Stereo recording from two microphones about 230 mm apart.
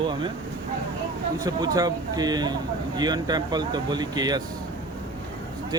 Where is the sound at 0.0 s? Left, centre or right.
Centre.